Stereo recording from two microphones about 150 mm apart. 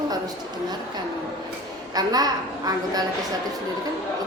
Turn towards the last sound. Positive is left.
turn(degrees=-25)  # may be behind; listen again after turning